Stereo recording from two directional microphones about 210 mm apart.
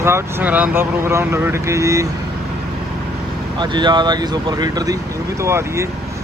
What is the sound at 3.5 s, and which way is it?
Speech, 20° right (ahead or behind).